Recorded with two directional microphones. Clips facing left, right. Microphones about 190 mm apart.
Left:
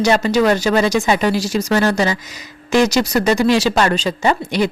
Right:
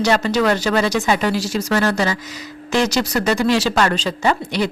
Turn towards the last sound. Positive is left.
turn(degrees=15)  # may be behind; listen again after turning